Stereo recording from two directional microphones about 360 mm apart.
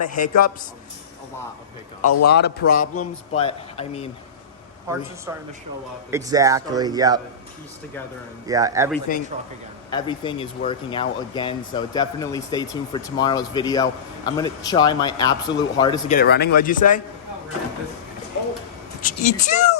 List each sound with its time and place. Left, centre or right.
0.0 s speech: left
2.2 s speech: left
2.8 s speech: left
3.3 s speech: centre
4.9 s speech: centre
6.1 s speech: centre
8.4 s speech: centre
9.1 s speech: left
9.9 s speech: centre
16.1 s speech: left
19.0 s speech: left